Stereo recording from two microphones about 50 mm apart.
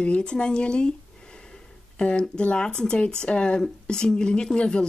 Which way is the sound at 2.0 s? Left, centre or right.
Centre.